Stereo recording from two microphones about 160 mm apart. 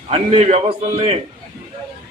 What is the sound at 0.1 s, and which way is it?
Speech, 40° right (ahead or behind).